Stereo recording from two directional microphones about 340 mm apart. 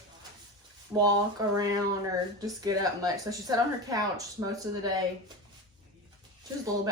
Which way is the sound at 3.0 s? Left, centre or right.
Centre.